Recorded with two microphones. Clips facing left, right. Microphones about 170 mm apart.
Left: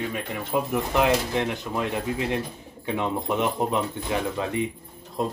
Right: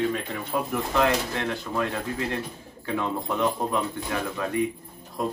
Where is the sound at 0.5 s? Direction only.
20° left (ahead or behind).